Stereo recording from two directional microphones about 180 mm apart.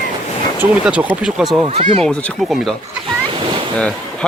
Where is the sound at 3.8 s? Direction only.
5° left (ahead or behind).